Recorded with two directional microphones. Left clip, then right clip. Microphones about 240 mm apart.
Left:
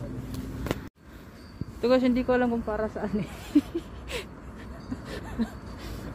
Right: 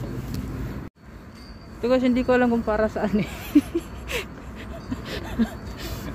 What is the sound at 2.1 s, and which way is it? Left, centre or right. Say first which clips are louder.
Speech: right 5 dB; centre.